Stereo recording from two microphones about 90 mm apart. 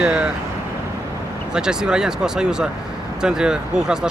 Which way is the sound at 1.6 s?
10° right (ahead or behind).